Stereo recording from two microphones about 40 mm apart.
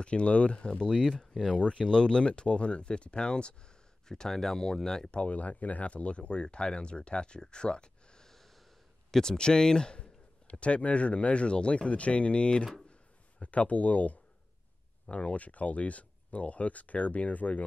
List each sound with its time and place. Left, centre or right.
0.0 s speech: left
4.1 s speech: centre
5.1 s speech: left
8.3 s snort: centre
9.1 s speech: centre; by 17.6 s left